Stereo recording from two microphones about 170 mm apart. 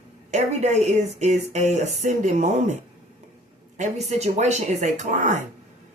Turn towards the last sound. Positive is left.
turn(degrees=-45)  # may be behind; listen again after turning